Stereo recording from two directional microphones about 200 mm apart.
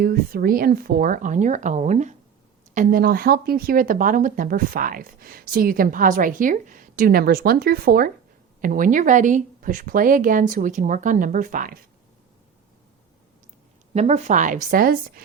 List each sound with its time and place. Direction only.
0.0 s speech: 45° right (ahead or behind)
13.9 s speech: 30° right (ahead or behind)